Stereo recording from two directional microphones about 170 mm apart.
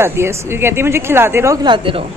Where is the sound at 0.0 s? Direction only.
15° right (ahead or behind).